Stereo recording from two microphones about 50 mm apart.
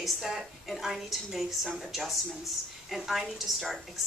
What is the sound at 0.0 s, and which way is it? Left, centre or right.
A woman's voice, centre.